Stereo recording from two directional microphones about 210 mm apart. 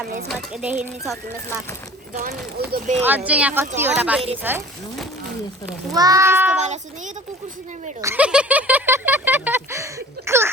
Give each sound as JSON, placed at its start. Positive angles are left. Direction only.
{"t": 0.3, "sound": "speech", "side_deg": -5}
{"t": 2.7, "sound": "a child's voice", "side_deg": -35}
{"t": 3.0, "sound": "speech", "side_deg": -10}
{"t": 5.9, "sound": "speech", "side_deg": -15}
{"t": 6.6, "sound": "a child's voice", "side_deg": -35}
{"t": 8.0, "sound": "a sound", "side_deg": -5}